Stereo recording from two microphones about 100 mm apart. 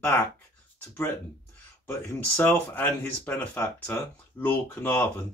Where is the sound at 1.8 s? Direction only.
25° left (ahead or behind).